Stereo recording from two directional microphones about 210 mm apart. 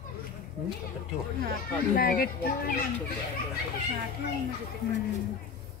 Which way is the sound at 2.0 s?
45° left (ahead or behind).